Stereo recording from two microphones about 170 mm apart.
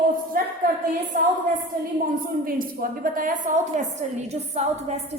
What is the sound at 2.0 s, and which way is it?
A woman's voice, 55° right (ahead or behind).